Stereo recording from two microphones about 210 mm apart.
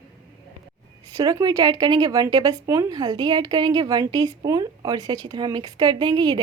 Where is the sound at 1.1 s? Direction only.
15° right (ahead or behind).